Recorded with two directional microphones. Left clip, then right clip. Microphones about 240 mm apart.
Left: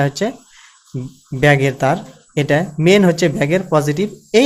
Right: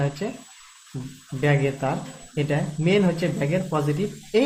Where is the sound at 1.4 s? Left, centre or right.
Left.